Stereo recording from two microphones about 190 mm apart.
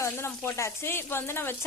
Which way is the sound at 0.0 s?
15° left (ahead or behind).